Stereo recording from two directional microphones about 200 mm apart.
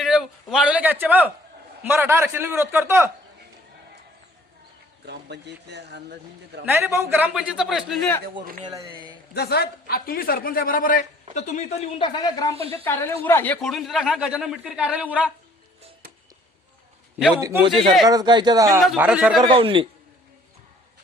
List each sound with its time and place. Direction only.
0.0 s a man's voice: 5° right (ahead or behind)
5.0 s speech: 55° right (ahead or behind)
6.7 s speech: 10° right (ahead or behind); by 8.2 s 5° left (ahead or behind)
8.6 s speech: 20° right (ahead or behind)
9.3 s a man's voice: 55° left (ahead or behind); by 12.5 s 15° left (ahead or behind)
12.5 s speech: 30° right (ahead or behind)
12.8 s a woman's voice: 10° left (ahead or behind); by 15.3 s 5° right (ahead or behind)
17.3 s a man's voice: 20° right (ahead or behind)
18.8 s speech: 5° right (ahead or behind)
19.5 s speech: 25° right (ahead or behind)